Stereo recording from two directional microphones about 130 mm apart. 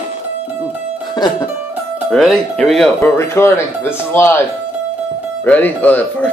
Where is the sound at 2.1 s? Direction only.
5° left (ahead or behind).